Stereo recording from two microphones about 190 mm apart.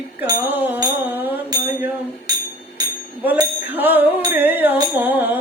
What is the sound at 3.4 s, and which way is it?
Music, 10° right (ahead or behind).